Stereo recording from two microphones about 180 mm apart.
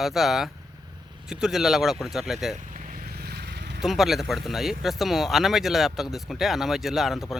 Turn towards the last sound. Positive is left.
turn(degrees=0)  # may be behind; listen again after turning